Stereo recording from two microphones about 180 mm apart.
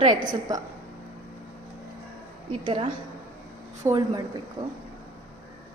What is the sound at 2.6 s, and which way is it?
Speech, 30° right (ahead or behind).